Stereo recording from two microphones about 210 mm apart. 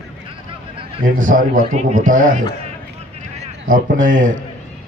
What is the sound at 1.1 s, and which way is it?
A man's voice, 40° right (ahead or behind).